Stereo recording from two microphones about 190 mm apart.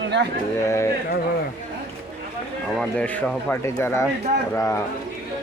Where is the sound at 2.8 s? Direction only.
5° left (ahead or behind).